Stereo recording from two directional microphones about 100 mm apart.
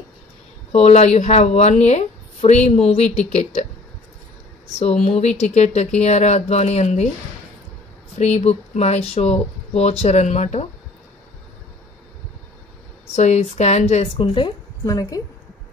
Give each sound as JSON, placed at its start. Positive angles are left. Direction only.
{"t": 0.7, "sound": "speech", "side_deg": 90}
{"t": 5.0, "sound": "speech", "side_deg": 90}
{"t": 8.2, "sound": "speech", "side_deg": 90}
{"t": 13.1, "sound": "speech", "side_deg": 90}
{"t": 14.9, "sound": "a woman's voice", "side_deg": 35}